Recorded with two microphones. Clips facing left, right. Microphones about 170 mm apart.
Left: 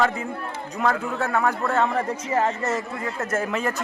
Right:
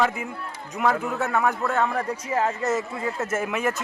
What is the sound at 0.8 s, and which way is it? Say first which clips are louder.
Speech: even; 5° right (ahead or behind).